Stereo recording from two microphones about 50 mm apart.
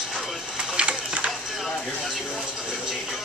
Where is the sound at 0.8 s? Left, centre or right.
Right.